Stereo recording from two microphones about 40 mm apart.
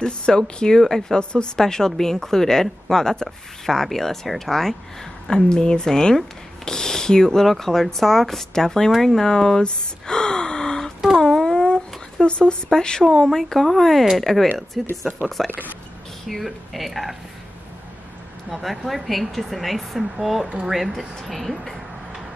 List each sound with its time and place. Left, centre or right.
0.0 s speech: centre
9.6 s gasp: left
11.1 s a sound: centre
12.7 s speech: centre
18.5 s speech: centre